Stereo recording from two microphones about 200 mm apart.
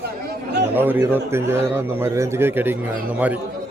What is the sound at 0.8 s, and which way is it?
A man's voice, 10° right (ahead or behind).